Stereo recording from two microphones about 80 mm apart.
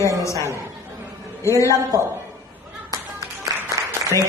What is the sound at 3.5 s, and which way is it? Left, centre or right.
Applause, right.